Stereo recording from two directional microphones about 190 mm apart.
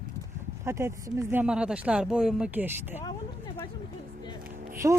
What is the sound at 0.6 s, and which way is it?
Speech, 15° right (ahead or behind).